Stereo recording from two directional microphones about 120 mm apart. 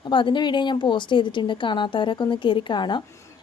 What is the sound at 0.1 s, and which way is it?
Speech, 40° left (ahead or behind).